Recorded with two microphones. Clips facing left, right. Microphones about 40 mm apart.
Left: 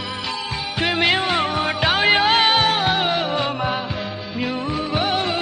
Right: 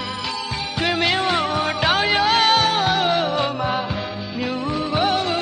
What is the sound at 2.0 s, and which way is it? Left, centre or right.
Music, left.